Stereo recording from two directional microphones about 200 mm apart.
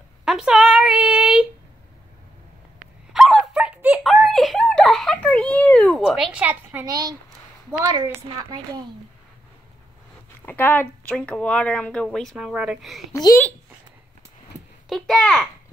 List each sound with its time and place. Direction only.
0.2 s a sound: centre (ahead or behind)
3.1 s a sound: centre (ahead or behind); by 7.2 s 20° right (ahead or behind)
7.8 s a woman's voice: 20° right (ahead or behind)
10.4 s speech: 10° left (ahead or behind)
13.1 s a child's voice: 15° left (ahead or behind)
14.9 s speech: centre (ahead or behind)